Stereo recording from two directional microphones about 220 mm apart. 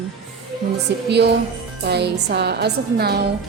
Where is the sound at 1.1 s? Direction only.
50° right (ahead or behind).